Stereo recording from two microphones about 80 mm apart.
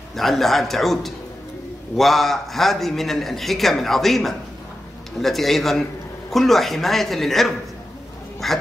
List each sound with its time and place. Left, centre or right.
0.1 s a man's voice: centre